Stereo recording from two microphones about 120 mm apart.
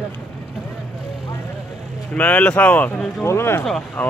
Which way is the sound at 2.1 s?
10° left (ahead or behind).